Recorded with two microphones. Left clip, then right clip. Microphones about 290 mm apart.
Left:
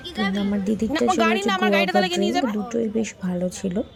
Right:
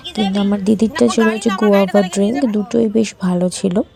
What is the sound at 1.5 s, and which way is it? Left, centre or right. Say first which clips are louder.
Speech: right 6 dB; centre.